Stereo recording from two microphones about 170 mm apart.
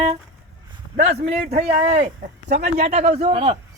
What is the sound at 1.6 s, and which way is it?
Speech, 40° right (ahead or behind).